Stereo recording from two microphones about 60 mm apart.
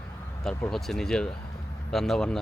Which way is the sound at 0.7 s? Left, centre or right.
Centre.